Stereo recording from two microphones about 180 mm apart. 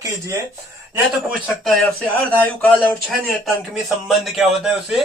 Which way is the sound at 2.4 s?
10° left (ahead or behind).